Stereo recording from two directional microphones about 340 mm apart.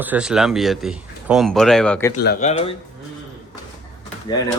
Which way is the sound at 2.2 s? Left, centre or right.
Centre.